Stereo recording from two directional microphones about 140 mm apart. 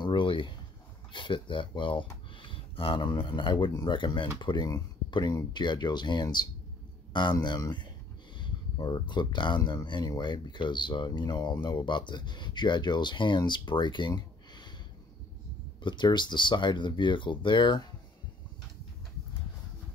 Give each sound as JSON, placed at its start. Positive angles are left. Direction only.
{"t": 0.0, "sound": "a sound", "side_deg": 35}
{"t": 1.1, "sound": "speech", "side_deg": 35}
{"t": 15.8, "sound": "speech", "side_deg": 35}